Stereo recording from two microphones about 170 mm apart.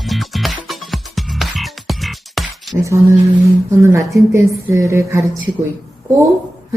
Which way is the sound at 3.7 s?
15° right (ahead or behind).